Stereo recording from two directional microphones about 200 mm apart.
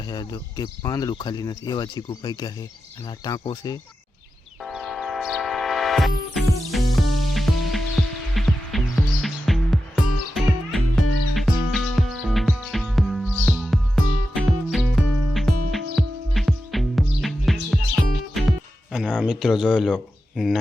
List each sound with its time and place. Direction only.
0.1 s speech: 20° left (ahead or behind)
4.6 s music: centre (ahead or behind)